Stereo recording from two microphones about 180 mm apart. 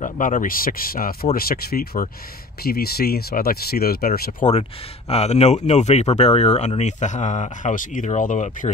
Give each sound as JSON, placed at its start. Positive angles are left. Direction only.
{"t": 0.0, "sound": "speech", "side_deg": 45}
{"t": 5.1, "sound": "speech", "side_deg": 35}